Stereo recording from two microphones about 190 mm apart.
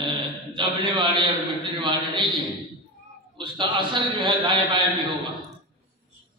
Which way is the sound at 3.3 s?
25° right (ahead or behind).